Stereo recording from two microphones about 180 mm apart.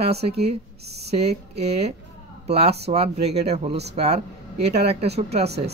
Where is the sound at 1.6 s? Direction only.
35° right (ahead or behind).